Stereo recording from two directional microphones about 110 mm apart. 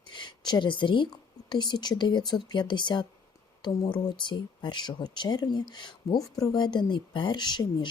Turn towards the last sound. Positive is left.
turn(degrees=40)  # may be behind; listen again after turning